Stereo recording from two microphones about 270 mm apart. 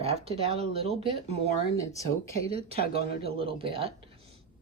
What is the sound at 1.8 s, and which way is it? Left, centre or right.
Speech, centre.